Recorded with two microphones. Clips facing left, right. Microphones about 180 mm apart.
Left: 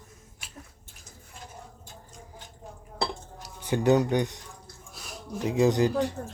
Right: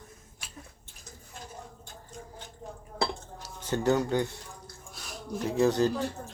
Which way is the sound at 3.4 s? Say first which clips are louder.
Left 3 dB; 15° left (ahead or behind).